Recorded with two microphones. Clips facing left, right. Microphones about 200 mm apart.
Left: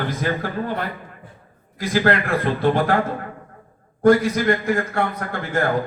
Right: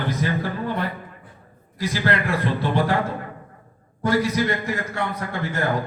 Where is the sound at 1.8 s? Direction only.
50° left (ahead or behind).